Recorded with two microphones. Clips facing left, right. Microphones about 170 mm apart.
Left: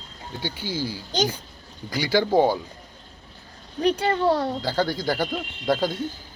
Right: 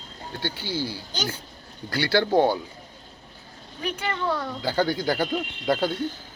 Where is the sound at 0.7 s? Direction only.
60° right (ahead or behind).